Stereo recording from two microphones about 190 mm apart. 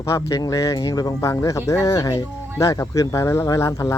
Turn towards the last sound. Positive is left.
turn(degrees=15)  # may be behind; listen again after turning